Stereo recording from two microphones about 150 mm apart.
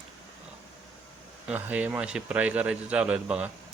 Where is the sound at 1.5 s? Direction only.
10° right (ahead or behind).